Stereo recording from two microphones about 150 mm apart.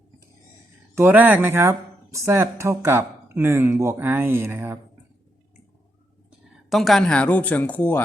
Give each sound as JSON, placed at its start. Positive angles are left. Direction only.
{"t": 0.9, "sound": "speech", "side_deg": -15}
{"t": 6.7, "sound": "speech", "side_deg": 0}